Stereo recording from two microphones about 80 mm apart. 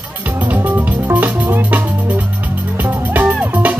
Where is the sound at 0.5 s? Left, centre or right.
Right.